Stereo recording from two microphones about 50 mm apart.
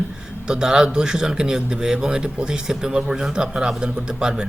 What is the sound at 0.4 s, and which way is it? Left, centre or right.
Speech, centre.